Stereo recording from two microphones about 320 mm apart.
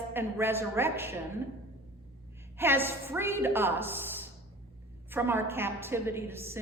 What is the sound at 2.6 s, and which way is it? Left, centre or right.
A woman's voice, centre.